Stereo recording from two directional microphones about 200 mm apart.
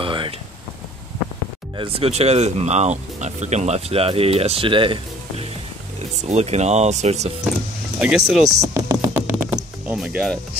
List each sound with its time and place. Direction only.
0.0 s a sound: 25° right (ahead or behind)
1.8 s speech: 30° right (ahead or behind)
8.0 s speech: 5° right (ahead or behind)
8.5 s music: 15° right (ahead or behind)